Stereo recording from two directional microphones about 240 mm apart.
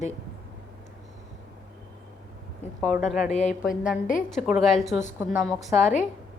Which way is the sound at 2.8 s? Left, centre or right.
Centre.